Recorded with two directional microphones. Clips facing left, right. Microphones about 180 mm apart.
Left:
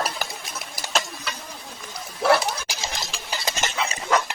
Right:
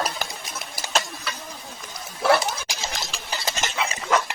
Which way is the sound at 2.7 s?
10° left (ahead or behind).